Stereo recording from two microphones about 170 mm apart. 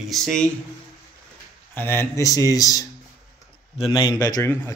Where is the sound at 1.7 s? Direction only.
15° left (ahead or behind).